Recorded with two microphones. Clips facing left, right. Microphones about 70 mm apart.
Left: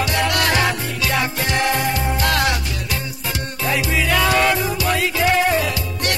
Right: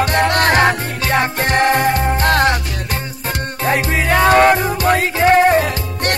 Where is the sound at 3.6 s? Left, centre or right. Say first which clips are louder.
Right 3 dB; right.